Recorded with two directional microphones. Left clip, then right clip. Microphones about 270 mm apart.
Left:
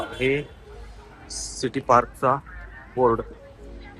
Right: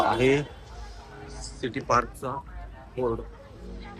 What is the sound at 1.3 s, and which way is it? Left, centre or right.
Speech, centre.